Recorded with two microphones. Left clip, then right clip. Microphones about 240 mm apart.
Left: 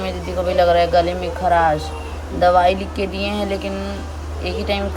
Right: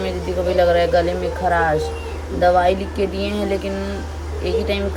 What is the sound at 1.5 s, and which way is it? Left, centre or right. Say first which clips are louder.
Speech: left 2 dB; left.